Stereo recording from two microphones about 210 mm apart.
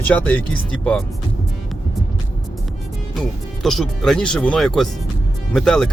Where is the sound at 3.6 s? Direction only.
Centre (ahead or behind).